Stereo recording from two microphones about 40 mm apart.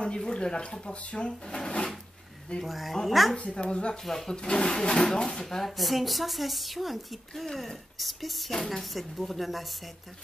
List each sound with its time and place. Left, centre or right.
0.0 s speech: left
2.6 s speech: centre
3.3 s speech: left
4.0 s speech: centre
4.3 s speech: left; by 9.7 s centre